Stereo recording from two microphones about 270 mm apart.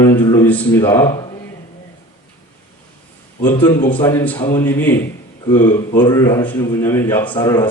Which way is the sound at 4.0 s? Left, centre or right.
Centre.